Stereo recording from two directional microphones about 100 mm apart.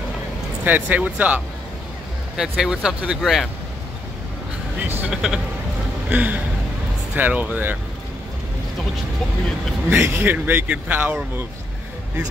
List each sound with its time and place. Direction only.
0.7 s speech: 15° right (ahead or behind); by 3.4 s centre (ahead or behind)
4.8 s a sound: 20° right (ahead or behind)
5.1 s speech: 5° right (ahead or behind)
9.8 s speech: 25° right (ahead or behind)